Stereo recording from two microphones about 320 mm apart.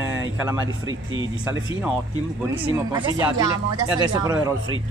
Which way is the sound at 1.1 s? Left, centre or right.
Right.